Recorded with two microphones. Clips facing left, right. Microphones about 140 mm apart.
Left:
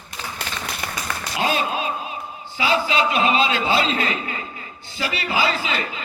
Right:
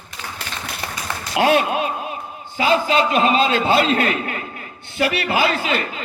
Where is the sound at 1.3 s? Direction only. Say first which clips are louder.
Right 6 dB; 70° right (ahead or behind).